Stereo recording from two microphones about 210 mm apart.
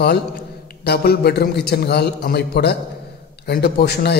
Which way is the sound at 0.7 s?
50° left (ahead or behind).